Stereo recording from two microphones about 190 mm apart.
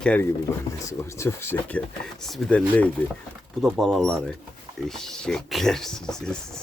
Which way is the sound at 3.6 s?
Centre (ahead or behind).